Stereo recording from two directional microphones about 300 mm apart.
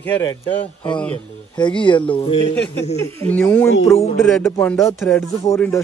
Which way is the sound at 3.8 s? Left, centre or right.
Centre.